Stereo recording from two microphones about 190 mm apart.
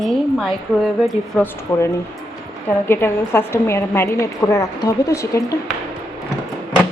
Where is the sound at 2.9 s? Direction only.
10° left (ahead or behind).